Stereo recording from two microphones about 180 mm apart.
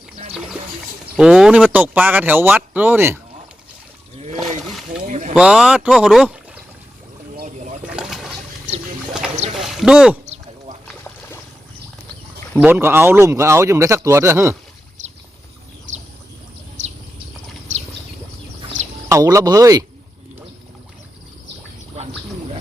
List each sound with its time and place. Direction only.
1.1 s speech: 5° right (ahead or behind)
4.4 s speech: centre (ahead or behind)
5.0 s vehicle: 40° right (ahead or behind)
5.3 s speech: 5° right (ahead or behind)
7.3 s a sound: 45° right (ahead or behind)
7.9 s water: 5° right (ahead or behind)
9.6 s a sound: centre (ahead or behind)
10.2 s a sound: 35° right (ahead or behind)
10.8 s boat: 10° left (ahead or behind)
12.5 s speech: 10° right (ahead or behind)
15.9 s a sound: 45° right (ahead or behind)
19.0 s speech: 15° right (ahead or behind)